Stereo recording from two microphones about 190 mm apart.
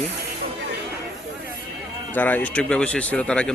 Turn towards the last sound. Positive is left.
turn(degrees=5)  # may be behind; listen again after turning